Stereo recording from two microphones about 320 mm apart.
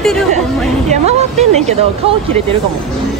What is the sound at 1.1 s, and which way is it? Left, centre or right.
Speech, centre.